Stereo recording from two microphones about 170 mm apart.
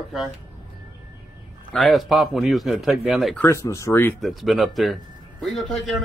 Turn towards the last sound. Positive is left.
turn(degrees=0)  # may be behind; listen again after turning